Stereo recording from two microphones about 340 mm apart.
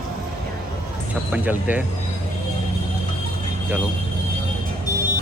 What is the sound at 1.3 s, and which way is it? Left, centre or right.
Speech, centre.